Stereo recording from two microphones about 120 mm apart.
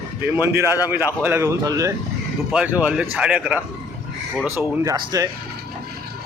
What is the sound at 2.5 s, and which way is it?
Speech, 10° right (ahead or behind).